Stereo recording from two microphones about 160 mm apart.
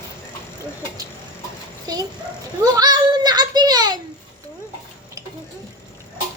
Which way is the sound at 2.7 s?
25° right (ahead or behind).